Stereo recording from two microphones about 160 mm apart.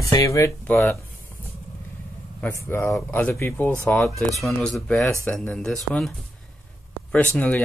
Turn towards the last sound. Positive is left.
turn(degrees=10)  # may be behind; listen again after turning